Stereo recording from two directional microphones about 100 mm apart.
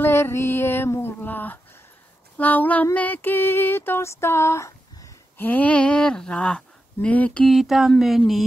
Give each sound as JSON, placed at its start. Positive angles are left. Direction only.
{"t": 0.0, "sound": "female singing", "side_deg": 25}
{"t": 1.2, "sound": "speech", "side_deg": 20}
{"t": 2.3, "sound": "female singing", "side_deg": 15}
{"t": 5.4, "sound": "speech", "side_deg": 15}
{"t": 7.4, "sound": "speech", "side_deg": 0}